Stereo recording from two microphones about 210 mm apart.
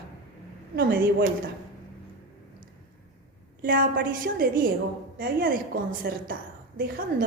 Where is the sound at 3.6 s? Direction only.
40° right (ahead or behind).